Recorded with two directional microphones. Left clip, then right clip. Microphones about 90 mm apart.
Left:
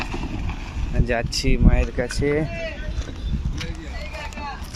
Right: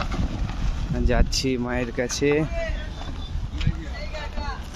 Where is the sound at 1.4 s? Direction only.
40° right (ahead or behind).